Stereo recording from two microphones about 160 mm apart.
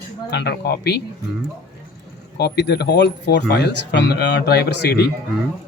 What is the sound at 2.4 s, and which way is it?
Speech, 90° left.